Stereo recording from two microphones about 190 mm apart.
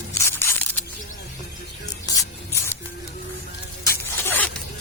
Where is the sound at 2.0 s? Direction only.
15° left (ahead or behind).